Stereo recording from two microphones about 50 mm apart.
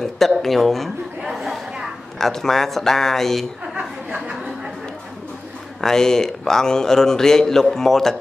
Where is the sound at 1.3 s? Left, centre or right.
Centre.